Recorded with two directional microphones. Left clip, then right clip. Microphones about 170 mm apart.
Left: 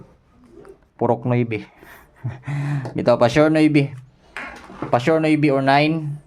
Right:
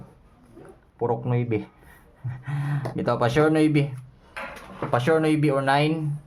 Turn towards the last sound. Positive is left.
turn(degrees=35)  # may be behind; listen again after turning